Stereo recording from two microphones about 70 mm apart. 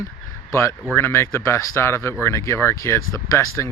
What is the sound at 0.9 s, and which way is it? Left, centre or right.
Speech, left.